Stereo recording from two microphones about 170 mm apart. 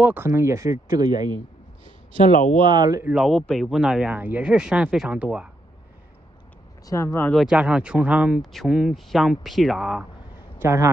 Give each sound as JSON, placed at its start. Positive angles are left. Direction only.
{"t": 0.0, "sound": "speech", "side_deg": -15}
{"t": 2.3, "sound": "speech", "side_deg": 50}
{"t": 2.6, "sound": "speech", "side_deg": -25}
{"t": 3.1, "sound": "speech", "side_deg": 0}
{"t": 6.9, "sound": "speech", "side_deg": 15}
{"t": 7.3, "sound": "speech", "side_deg": -5}
{"t": 10.6, "sound": "a man's voice", "side_deg": -15}